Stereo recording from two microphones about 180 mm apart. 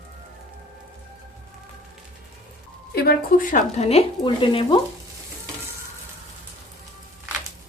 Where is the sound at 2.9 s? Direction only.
55° left (ahead or behind); by 4.7 s 30° left (ahead or behind).